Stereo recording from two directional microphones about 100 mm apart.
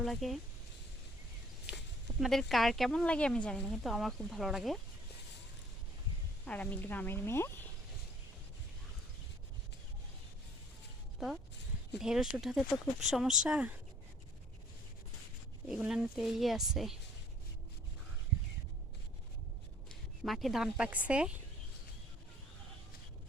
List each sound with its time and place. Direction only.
0.0 s speech: centre (ahead or behind)
2.1 s speech: centre (ahead or behind)
6.4 s speech: 10° left (ahead or behind)
11.9 s speech: 5° right (ahead or behind)
15.9 s speech: 5° right (ahead or behind)
19.9 s speech: centre (ahead or behind)